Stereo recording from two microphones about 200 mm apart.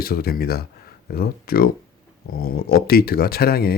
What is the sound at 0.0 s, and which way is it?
Speech, 50° left (ahead or behind).